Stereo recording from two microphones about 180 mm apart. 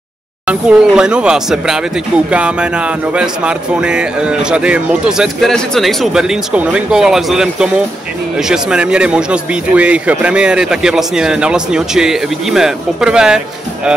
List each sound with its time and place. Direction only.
0.5 s speech: 5° right (ahead or behind)